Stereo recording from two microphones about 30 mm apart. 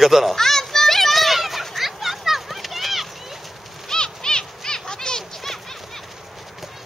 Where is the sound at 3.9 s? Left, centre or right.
Left.